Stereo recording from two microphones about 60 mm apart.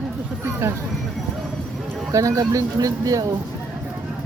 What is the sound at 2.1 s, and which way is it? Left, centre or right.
Speech, right.